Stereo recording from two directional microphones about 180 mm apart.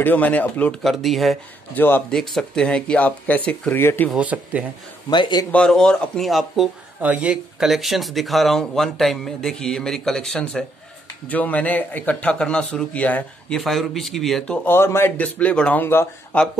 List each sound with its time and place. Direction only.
0.0 s a man's voice: 10° left (ahead or behind)
4.1 s speech: 5° right (ahead or behind)
5.1 s speech: 25° left (ahead or behind)
5.5 s a man's voice: 5° left (ahead or behind)